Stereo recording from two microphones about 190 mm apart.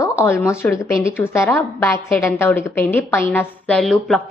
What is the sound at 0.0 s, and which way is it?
A woman's voice, 15° left (ahead or behind).